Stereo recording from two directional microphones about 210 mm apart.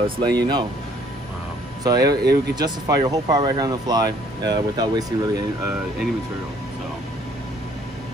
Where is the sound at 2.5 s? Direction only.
20° right (ahead or behind).